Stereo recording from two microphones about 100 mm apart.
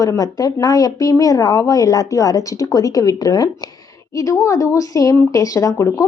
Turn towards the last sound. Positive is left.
turn(degrees=30)  # may be behind; listen again after turning